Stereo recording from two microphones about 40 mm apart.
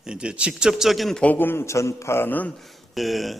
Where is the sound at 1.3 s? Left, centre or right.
Left.